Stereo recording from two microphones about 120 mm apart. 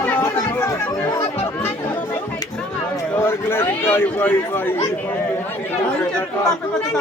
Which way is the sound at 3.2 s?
20° left (ahead or behind).